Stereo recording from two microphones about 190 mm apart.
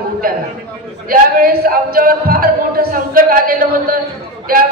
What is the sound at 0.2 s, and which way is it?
Speech, 50° right (ahead or behind).